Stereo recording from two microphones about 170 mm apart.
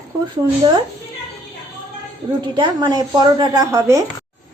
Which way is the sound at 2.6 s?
25° right (ahead or behind).